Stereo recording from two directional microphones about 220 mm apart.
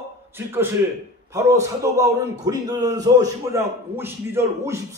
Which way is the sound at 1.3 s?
15° right (ahead or behind).